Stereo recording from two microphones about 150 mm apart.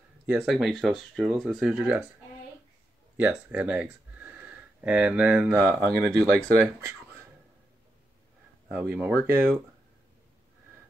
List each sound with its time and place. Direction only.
0.3 s speech: 5° right (ahead or behind)
3.2 s speech: 10° right (ahead or behind)
8.6 s speech: 15° right (ahead or behind)